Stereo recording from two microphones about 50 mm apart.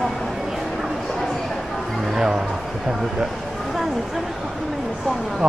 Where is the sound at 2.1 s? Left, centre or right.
Centre.